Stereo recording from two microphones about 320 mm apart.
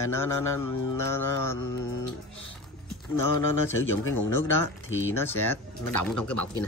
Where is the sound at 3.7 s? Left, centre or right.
Left.